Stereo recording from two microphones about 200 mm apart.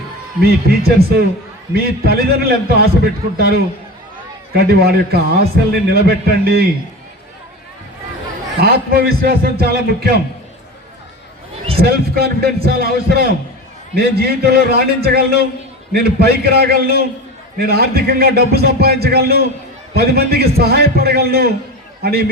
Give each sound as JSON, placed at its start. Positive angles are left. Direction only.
{"t": 0.4, "sound": "a man's voice", "side_deg": -50}
{"t": 8.6, "sound": "a man's voice", "side_deg": -50}
{"t": 11.8, "sound": "a man's voice", "side_deg": -50}